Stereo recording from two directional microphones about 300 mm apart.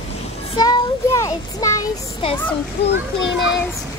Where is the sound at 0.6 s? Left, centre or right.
Centre.